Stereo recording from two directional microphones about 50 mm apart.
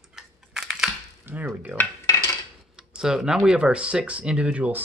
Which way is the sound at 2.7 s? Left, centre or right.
Centre.